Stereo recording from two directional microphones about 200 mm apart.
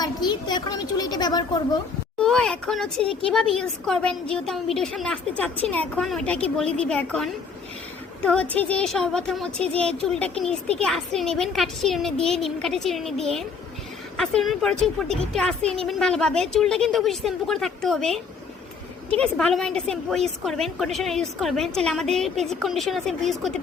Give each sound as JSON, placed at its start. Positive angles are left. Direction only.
{"t": 0.0, "sound": "a child's voice", "side_deg": 20}
{"t": 2.1, "sound": "a woman's voice", "side_deg": 5}